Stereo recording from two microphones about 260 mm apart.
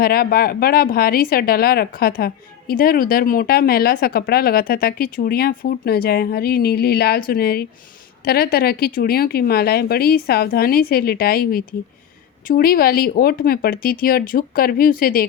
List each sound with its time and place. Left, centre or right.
0.0 s speech: left